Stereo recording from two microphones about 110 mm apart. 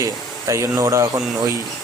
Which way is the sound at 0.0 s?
30° right (ahead or behind).